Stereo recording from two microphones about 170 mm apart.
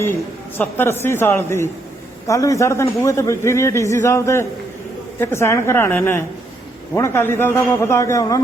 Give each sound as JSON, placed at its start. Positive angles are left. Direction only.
{"t": 0.8, "sound": "a man's voice", "side_deg": 15}